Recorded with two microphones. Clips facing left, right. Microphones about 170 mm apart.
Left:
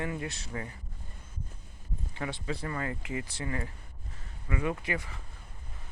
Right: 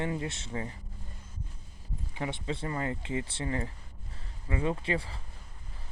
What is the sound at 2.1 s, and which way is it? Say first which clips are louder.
Speech: right 1 dB; 20° right (ahead or behind).